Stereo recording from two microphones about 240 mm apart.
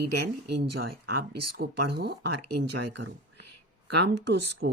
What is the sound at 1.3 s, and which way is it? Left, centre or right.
Speech, right.